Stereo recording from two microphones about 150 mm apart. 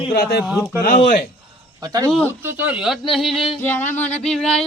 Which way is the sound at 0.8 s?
60° left (ahead or behind).